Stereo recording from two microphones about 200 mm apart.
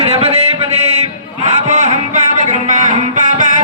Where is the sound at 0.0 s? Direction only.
30° right (ahead or behind).